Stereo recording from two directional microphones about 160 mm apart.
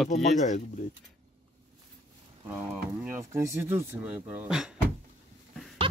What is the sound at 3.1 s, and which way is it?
Speech, 15° right (ahead or behind).